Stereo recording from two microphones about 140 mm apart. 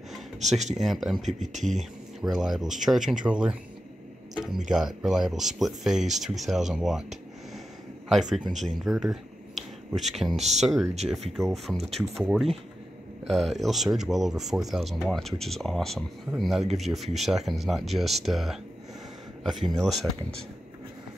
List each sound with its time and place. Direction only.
0.4 s speech: 55° right (ahead or behind)
0.7 s speech: centre (ahead or behind)
1.4 s speech: 60° right (ahead or behind)
1.8 s speech: centre (ahead or behind)
8.1 s speech: centre (ahead or behind)